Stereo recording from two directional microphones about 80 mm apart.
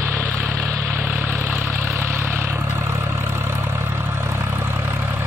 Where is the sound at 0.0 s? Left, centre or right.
Right.